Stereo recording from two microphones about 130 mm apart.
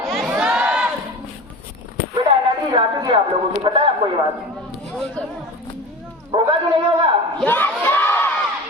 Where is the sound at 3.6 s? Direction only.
40° right (ahead or behind).